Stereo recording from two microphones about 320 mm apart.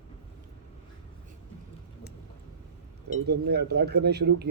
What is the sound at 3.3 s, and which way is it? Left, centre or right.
Speech, right.